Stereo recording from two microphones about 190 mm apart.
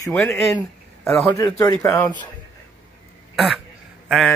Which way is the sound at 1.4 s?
20° left (ahead or behind).